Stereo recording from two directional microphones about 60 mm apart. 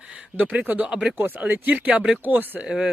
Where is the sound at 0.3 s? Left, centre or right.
Right.